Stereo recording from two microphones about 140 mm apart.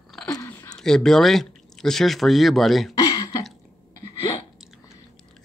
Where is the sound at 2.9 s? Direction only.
25° left (ahead or behind).